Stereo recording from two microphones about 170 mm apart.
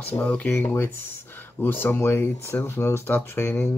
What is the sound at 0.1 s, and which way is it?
Speech, 10° left (ahead or behind).